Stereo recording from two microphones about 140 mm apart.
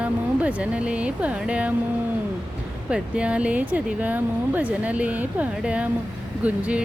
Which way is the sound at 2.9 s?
10° right (ahead or behind).